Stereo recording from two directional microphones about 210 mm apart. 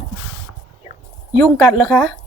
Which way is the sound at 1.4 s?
5° left (ahead or behind).